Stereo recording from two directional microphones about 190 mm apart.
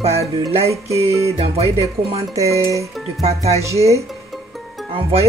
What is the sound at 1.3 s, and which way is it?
Speech, 30° right (ahead or behind).